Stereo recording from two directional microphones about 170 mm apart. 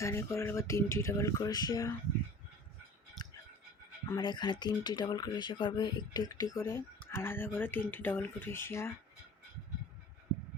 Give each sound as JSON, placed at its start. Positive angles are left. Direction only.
{"t": 0.0, "sound": "speech", "side_deg": 15}
{"t": 4.2, "sound": "speech", "side_deg": 25}